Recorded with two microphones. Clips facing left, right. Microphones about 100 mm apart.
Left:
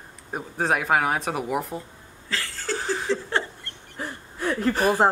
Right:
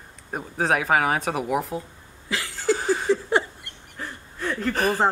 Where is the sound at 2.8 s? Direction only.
5° right (ahead or behind).